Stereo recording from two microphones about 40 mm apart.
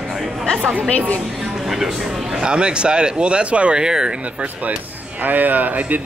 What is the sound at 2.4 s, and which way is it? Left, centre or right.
Speech, right.